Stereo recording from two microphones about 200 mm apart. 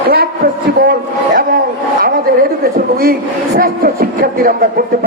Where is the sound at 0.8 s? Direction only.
50° right (ahead or behind).